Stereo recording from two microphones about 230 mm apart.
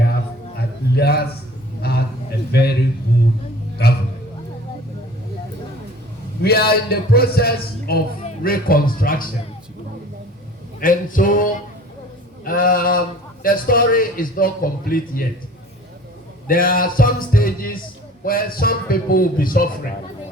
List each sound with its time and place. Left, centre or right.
0.9 s a man's voice: left
1.8 s a sound: left
2.5 s a man's voice: left
3.8 s a sound: left
6.4 s a man's voice: left
10.8 s a man's voice: left
16.5 s a man's voice: left